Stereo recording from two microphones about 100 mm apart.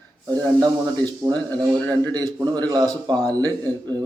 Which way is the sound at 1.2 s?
35° right (ahead or behind).